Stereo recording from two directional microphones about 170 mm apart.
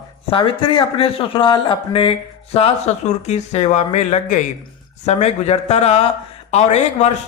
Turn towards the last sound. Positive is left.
turn(degrees=40)  # may be behind; listen again after turning